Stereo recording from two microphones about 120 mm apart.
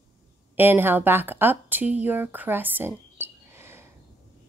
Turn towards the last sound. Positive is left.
turn(degrees=-20)  # may be behind; listen again after turning